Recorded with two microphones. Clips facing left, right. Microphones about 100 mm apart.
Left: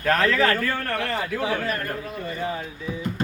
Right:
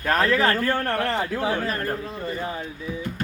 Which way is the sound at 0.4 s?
30° right (ahead or behind).